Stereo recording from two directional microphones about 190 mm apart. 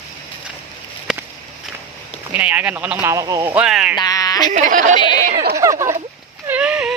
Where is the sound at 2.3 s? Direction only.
10° right (ahead or behind).